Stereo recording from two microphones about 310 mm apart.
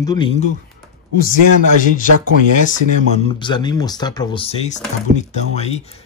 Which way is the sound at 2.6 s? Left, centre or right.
Left.